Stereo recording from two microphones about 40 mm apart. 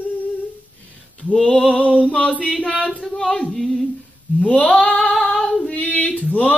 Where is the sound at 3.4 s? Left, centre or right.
Centre.